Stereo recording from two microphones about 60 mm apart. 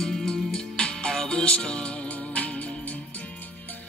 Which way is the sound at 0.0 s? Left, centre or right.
Centre.